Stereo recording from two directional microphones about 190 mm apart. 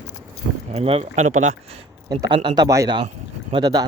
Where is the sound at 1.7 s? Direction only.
25° right (ahead or behind).